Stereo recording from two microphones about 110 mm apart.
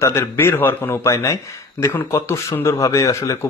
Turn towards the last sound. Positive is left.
turn(degrees=30)  # may be behind; listen again after turning